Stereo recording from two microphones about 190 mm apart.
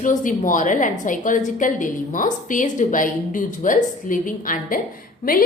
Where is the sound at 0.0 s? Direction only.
40° left (ahead or behind).